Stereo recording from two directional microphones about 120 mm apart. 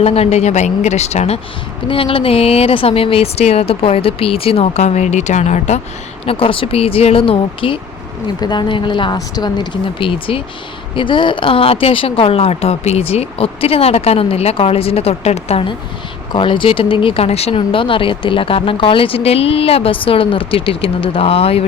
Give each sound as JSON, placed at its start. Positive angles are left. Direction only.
{"t": 0.0, "sound": "a woman's voice", "side_deg": 55}
{"t": 1.9, "sound": "a woman's voice", "side_deg": 50}
{"t": 6.2, "sound": "speech", "side_deg": 50}
{"t": 8.4, "sound": "speech", "side_deg": 35}
{"t": 16.3, "sound": "speech", "side_deg": 45}